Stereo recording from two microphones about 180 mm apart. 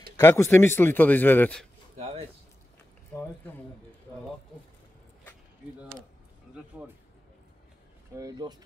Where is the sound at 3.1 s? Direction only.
10° left (ahead or behind).